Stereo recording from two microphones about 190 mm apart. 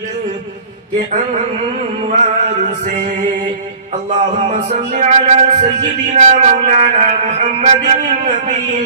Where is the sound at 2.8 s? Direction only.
40° right (ahead or behind).